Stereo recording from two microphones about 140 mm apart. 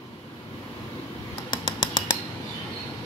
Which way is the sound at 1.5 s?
35° left (ahead or behind).